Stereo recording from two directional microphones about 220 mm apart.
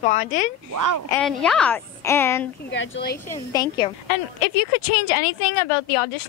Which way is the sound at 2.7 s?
50° left (ahead or behind).